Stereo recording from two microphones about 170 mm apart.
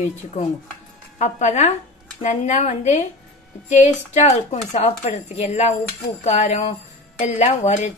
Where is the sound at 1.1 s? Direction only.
40° left (ahead or behind).